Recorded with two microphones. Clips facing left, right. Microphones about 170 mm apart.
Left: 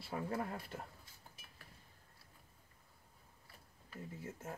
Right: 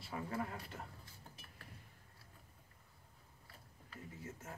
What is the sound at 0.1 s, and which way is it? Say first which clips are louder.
Speech: left 2 dB; 40° left (ahead or behind).